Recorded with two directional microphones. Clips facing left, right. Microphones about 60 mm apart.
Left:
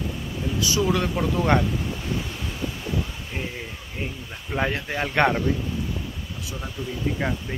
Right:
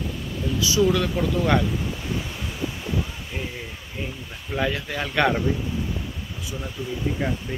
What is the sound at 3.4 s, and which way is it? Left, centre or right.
Speech, left.